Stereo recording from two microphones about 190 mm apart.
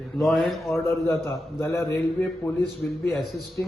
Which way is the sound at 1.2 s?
15° left (ahead or behind).